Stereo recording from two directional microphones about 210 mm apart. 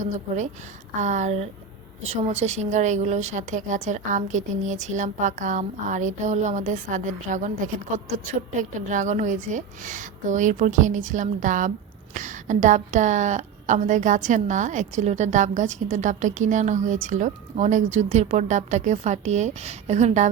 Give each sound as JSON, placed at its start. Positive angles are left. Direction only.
{"t": 1.0, "sound": "a woman's voice", "side_deg": -35}